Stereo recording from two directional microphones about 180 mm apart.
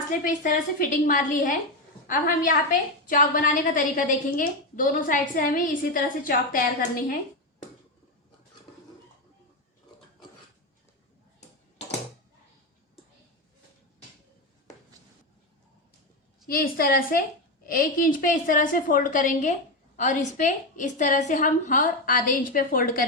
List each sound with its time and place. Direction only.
0.1 s a woman's voice: 45° left (ahead or behind)
16.5 s a woman's voice: 55° left (ahead or behind)